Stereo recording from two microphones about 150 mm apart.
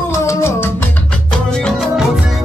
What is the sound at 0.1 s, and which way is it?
Music, 20° left (ahead or behind).